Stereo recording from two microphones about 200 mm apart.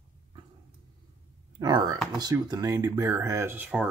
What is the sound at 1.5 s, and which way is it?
Speech, 20° right (ahead or behind).